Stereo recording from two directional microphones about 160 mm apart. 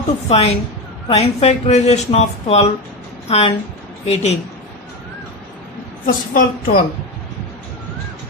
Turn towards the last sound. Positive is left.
turn(degrees=60)  # may be behind; listen again after turning